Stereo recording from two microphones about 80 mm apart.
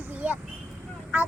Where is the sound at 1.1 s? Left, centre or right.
Centre.